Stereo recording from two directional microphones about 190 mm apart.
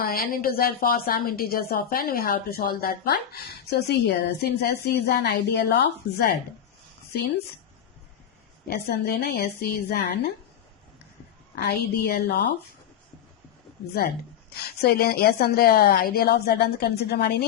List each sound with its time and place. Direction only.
0.0 s a woman's voice: 50° left (ahead or behind)
8.6 s a woman's voice: 55° left (ahead or behind)
11.5 s a woman's voice: 55° left (ahead or behind)
14.5 s a woman's voice: 55° left (ahead or behind)